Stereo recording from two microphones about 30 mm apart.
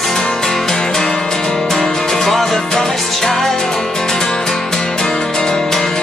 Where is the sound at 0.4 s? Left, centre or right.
Centre.